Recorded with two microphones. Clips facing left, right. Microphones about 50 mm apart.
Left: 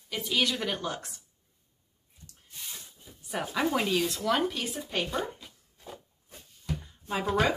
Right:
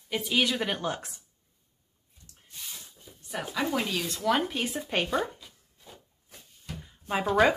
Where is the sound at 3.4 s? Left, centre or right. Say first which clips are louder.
Left 1 dB; centre.